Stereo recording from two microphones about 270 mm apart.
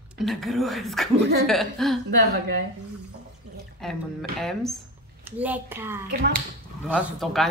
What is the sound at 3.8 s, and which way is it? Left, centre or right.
A woman's voice, centre.